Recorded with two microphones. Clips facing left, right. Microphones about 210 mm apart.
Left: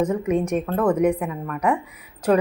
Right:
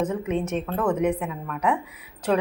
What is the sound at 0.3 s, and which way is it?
A woman's voice, 10° left (ahead or behind).